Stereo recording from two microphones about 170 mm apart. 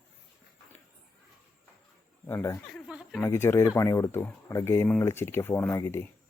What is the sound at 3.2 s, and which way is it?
Speech, 15° left (ahead or behind).